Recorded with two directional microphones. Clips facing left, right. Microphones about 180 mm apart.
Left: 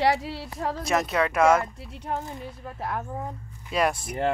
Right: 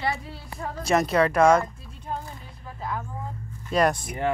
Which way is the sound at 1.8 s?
70° left (ahead or behind).